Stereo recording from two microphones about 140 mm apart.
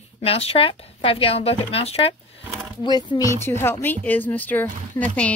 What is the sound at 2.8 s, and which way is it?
Speech, 30° left (ahead or behind).